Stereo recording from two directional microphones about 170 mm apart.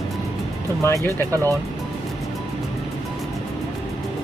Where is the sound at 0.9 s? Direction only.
15° left (ahead or behind).